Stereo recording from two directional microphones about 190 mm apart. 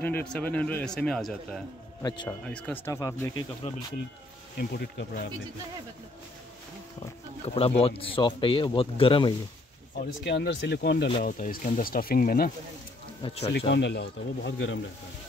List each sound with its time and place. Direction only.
0.0 s speech: 5° left (ahead or behind)
4.6 s speech: 55° left (ahead or behind)
7.0 s speech: 30° left (ahead or behind)
9.9 s speech: 60° left (ahead or behind)
11.2 s speech: 40° left (ahead or behind)
13.2 s speech: 35° left (ahead or behind)
13.5 s speech: 65° left (ahead or behind)